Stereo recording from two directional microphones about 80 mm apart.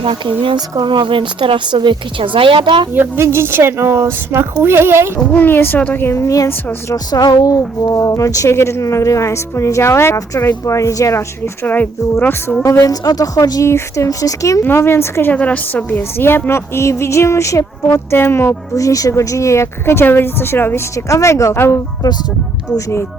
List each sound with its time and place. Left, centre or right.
0.1 s speech: right
2.9 s speech: right
5.3 s a woman's voice: left
6.9 s a woman's voice: left
11.6 s a woman's voice: left
12.6 s a woman's voice: left
13.7 s a woman's voice: left
14.6 s a woman's voice: left
15.3 s a woman's voice: centre; by 17.7 s left
18.1 s a woman's voice: left
20.9 s a woman's voice: left